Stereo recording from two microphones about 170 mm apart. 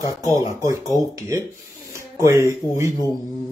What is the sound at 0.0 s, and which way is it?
A man's voice, 20° right (ahead or behind).